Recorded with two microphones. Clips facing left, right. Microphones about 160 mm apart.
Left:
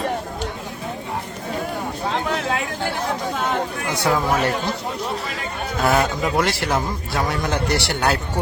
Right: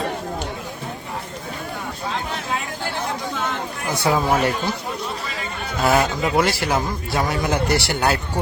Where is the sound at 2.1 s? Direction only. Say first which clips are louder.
Left 4 dB; 75° left (ahead or behind).